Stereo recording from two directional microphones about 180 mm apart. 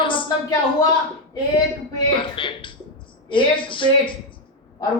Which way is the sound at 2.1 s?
25° left (ahead or behind).